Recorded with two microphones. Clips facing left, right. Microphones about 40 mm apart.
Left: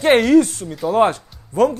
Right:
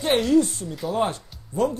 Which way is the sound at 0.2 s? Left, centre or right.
Left.